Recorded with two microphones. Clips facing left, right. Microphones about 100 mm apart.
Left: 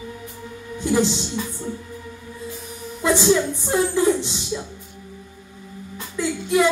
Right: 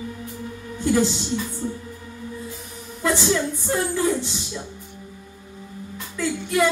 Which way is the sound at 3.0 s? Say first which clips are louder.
Left 4 dB; 20° left (ahead or behind).